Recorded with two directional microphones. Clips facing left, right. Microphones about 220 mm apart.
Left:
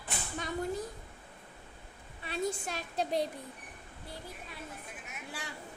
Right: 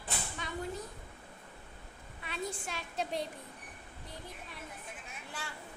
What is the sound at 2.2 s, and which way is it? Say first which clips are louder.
A woman's voice: left 5 dB; 40° left (ahead or behind).